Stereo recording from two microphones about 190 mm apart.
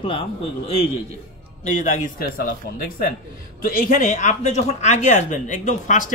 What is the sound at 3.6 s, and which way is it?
Speech, 45° left (ahead or behind).